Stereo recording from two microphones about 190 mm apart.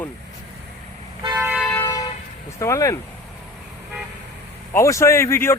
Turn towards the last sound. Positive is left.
turn(degrees=15)  # may be behind; listen again after turning